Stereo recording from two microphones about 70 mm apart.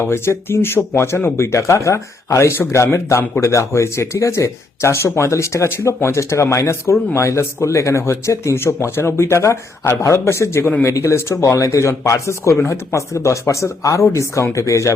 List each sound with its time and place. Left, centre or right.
0.0 s speech: left